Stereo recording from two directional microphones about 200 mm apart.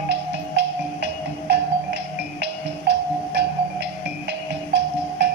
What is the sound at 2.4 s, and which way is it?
Music, 60° right (ahead or behind).